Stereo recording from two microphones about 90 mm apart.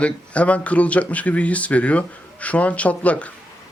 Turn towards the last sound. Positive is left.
turn(degrees=15)  # may be behind; listen again after turning